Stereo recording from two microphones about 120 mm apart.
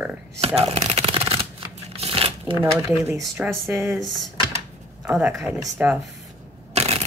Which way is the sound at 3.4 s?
Centre (ahead or behind).